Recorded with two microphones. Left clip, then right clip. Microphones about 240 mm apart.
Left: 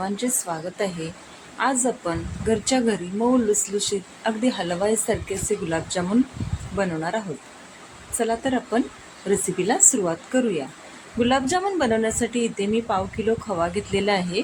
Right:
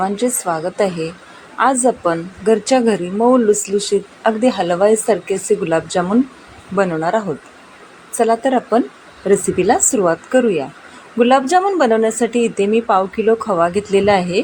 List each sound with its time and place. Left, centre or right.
0.0 s a woman's voice: centre
8.2 s a woman's voice: centre